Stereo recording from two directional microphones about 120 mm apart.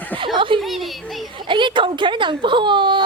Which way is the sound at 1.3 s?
40° right (ahead or behind).